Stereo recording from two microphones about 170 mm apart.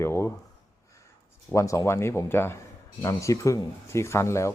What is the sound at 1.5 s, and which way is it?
Speech, 20° left (ahead or behind).